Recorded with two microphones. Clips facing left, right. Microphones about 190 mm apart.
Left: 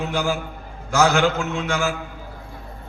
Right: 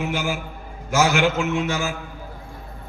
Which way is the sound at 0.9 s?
15° right (ahead or behind).